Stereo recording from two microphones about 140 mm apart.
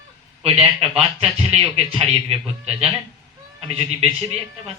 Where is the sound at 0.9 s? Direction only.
45° right (ahead or behind).